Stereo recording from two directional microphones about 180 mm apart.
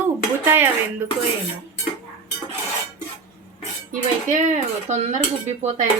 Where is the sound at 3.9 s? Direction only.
45° right (ahead or behind).